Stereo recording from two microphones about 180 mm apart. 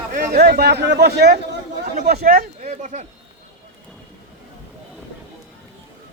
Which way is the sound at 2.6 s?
40° right (ahead or behind).